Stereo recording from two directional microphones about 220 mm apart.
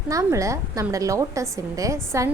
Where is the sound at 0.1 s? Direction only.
15° right (ahead or behind).